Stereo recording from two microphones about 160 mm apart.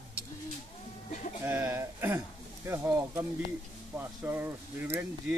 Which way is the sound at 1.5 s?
15° right (ahead or behind).